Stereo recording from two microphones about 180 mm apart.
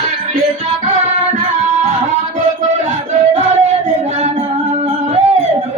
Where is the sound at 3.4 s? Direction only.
40° right (ahead or behind).